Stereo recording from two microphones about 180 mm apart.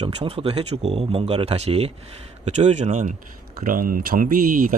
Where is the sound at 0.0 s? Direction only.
35° right (ahead or behind).